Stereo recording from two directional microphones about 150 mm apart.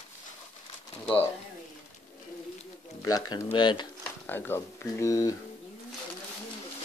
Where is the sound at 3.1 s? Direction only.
25° left (ahead or behind).